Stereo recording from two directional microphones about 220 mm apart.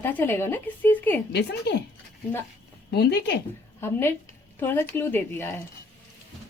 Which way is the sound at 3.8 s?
10° left (ahead or behind).